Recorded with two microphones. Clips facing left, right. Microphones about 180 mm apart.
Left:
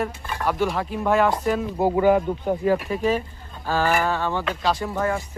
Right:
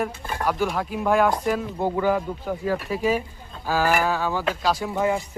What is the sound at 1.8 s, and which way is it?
Speech, 20° left (ahead or behind).